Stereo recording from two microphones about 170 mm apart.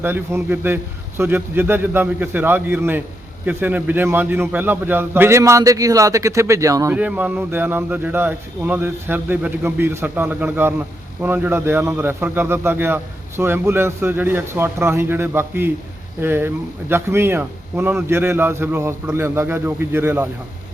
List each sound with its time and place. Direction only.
0.0 s speech: 15° right (ahead or behind)